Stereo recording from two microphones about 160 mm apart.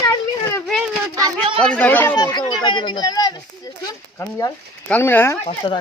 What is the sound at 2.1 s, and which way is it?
Speech, 25° left (ahead or behind).